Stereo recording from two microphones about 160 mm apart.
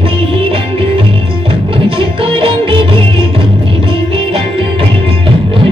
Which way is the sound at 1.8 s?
35° right (ahead or behind).